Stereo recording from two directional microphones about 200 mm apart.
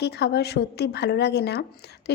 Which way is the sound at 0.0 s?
55° left (ahead or behind).